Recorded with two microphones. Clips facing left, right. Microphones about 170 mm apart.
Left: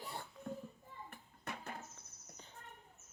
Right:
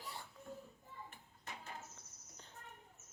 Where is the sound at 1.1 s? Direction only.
60° left (ahead or behind).